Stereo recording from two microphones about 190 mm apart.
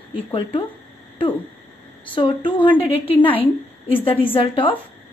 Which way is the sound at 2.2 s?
25° left (ahead or behind).